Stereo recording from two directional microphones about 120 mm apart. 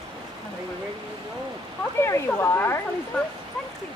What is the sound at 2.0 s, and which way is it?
Speech, 20° left (ahead or behind).